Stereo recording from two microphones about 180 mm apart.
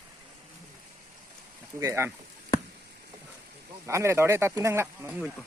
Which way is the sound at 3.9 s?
15° right (ahead or behind).